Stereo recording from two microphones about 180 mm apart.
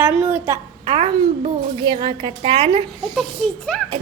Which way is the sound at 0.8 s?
35° right (ahead or behind).